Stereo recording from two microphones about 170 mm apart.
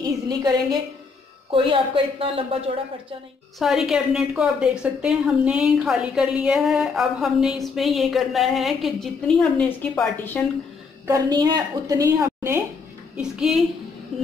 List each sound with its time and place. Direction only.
0.0 s a woman's voice: 25° right (ahead or behind)
3.5 s a woman's voice: centre (ahead or behind)
11.1 s a woman's voice: 20° right (ahead or behind)
13.1 s a woman's voice: 5° right (ahead or behind)